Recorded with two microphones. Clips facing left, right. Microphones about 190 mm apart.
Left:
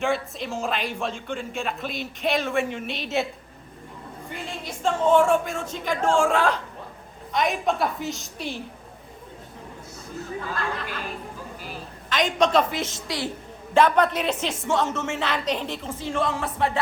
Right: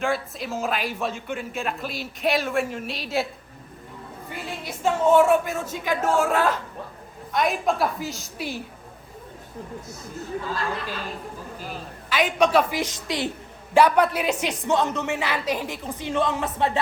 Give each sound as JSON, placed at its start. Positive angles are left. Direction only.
{"t": 0.0, "sound": "a man's voice", "side_deg": 0}
{"t": 4.3, "sound": "a man's voice", "side_deg": -5}
{"t": 12.0, "sound": "a woman's voice", "side_deg": -10}
{"t": 13.7, "sound": "a woman's voice", "side_deg": -10}